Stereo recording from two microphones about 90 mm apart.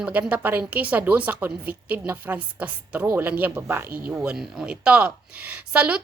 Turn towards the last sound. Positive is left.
turn(degrees=-15)  # may be behind; listen again after turning